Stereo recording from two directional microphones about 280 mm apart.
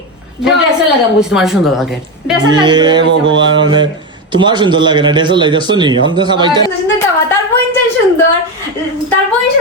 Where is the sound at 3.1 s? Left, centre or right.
Right.